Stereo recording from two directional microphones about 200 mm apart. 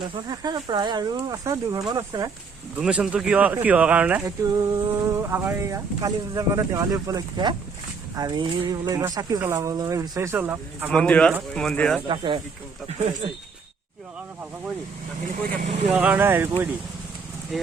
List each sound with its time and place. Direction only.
0.0 s speech: 20° right (ahead or behind)
2.7 s speech: 5° right (ahead or behind)
10.9 s speech: 5° left (ahead or behind)
12.0 s speech: 25° right (ahead or behind)
15.3 s speech: 40° right (ahead or behind)
15.9 s speech: 5° right (ahead or behind)
17.5 s speech: centre (ahead or behind)